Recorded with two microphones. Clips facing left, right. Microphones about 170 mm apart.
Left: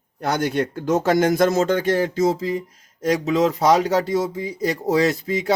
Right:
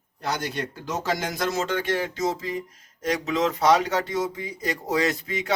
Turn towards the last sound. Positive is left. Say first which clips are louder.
# left 6 dB
turn(degrees=35)  # may be behind; listen again after turning